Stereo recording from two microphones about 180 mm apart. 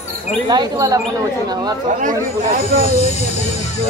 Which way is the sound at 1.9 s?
45° right (ahead or behind).